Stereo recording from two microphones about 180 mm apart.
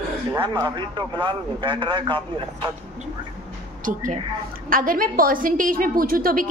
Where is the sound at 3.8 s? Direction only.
45° right (ahead or behind).